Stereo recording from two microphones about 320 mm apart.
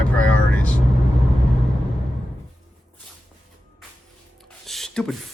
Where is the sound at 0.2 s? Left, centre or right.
Centre.